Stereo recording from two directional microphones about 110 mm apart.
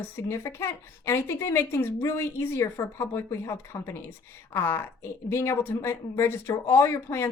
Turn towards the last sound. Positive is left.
turn(degrees=25)  # may be behind; listen again after turning